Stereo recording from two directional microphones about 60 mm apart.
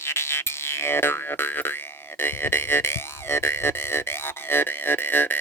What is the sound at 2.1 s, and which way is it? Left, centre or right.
Speech, left.